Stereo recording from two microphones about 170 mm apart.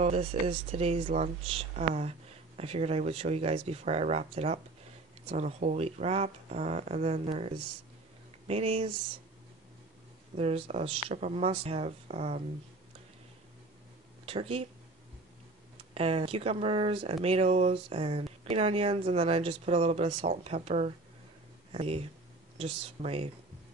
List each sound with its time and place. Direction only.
0.0 s speech: 35° right (ahead or behind)
10.3 s speech: 35° right (ahead or behind)
14.2 s speech: 35° right (ahead or behind)
15.9 s speech: 35° right (ahead or behind)